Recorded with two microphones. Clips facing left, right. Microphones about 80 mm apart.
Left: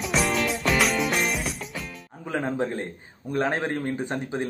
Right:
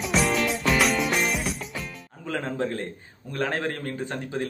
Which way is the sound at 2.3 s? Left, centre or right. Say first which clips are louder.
Left 1 dB; centre.